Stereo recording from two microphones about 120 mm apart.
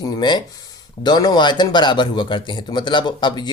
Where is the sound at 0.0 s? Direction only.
40° left (ahead or behind).